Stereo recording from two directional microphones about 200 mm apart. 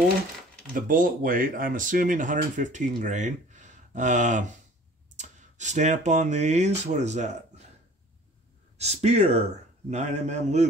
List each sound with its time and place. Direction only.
0.7 s speech: 45° right (ahead or behind)
8.7 s speech: 35° right (ahead or behind)